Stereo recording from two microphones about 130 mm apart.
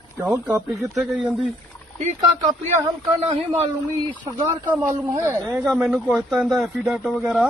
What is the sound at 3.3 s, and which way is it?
Speech, 55° right (ahead or behind).